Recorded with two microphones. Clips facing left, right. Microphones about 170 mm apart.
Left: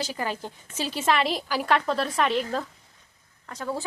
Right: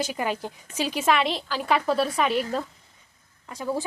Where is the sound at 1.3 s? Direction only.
10° left (ahead or behind).